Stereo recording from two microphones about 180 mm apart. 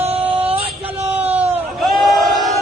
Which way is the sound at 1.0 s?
10° right (ahead or behind).